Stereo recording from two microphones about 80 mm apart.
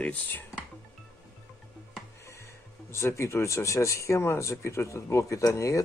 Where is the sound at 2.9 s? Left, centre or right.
Left.